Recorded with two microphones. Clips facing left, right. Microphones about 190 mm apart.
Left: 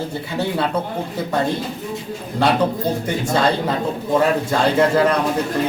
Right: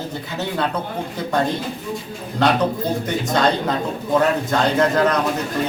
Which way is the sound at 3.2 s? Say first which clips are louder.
Left 1 dB; 5° left (ahead or behind).